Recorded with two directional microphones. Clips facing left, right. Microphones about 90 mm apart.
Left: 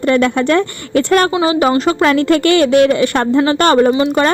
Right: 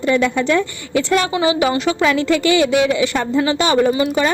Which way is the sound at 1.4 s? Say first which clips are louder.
Left 4 dB; 40° left (ahead or behind).